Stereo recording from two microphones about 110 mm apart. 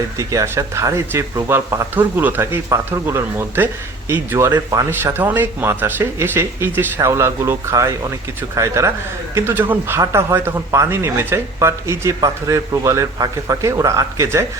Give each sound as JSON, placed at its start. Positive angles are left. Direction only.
{"t": 0.2, "sound": "speech", "side_deg": -30}
{"t": 4.5, "sound": "speech", "side_deg": -30}
{"t": 4.9, "sound": "speech", "side_deg": -20}